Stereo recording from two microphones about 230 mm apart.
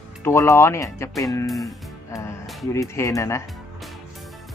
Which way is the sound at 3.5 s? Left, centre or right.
Centre.